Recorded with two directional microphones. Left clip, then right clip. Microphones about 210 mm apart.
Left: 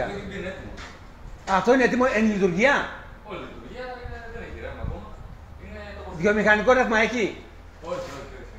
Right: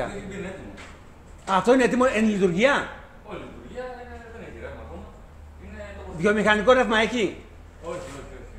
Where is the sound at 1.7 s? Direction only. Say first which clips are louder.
Even; 20° right (ahead or behind).